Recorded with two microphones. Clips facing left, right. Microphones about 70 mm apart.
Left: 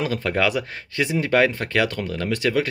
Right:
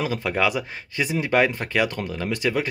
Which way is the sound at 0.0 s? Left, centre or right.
Centre.